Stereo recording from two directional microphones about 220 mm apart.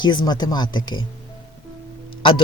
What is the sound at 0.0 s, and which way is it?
Speech, 20° left (ahead or behind).